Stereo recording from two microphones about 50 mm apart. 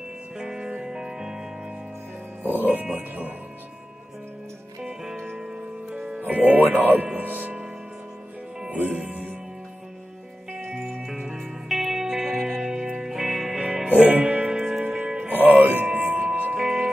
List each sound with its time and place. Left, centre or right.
0.4 s music: centre
2.4 s speech: right
4.8 s music: centre
6.2 s speech: right
8.6 s music: right
10.6 s music: centre
13.8 s music: right
14.2 s music: centre
15.3 s music: right
16.1 s music: centre